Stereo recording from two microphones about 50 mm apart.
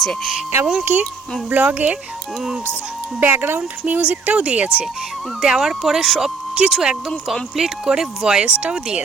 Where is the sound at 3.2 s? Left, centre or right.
Right.